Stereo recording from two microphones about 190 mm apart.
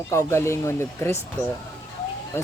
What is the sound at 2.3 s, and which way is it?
Speech, 15° left (ahead or behind).